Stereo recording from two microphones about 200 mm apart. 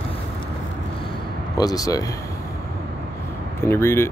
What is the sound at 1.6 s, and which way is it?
Speech, 20° left (ahead or behind).